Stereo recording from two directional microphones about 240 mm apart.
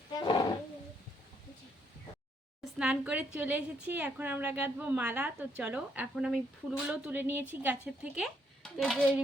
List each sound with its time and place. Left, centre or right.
0.2 s roaring cats: centre
2.7 s a woman's voice: centre